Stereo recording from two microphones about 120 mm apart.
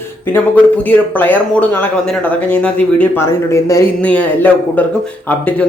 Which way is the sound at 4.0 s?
10° left (ahead or behind).